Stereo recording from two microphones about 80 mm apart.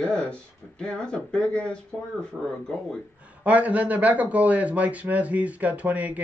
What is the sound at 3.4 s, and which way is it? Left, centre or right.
A man's voice, centre.